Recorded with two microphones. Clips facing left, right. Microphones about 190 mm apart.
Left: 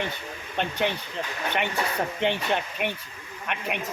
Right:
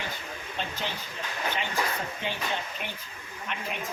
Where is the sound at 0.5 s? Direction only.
65° left (ahead or behind).